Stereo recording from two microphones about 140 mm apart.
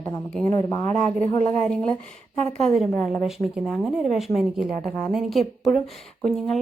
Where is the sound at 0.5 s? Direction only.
25° left (ahead or behind).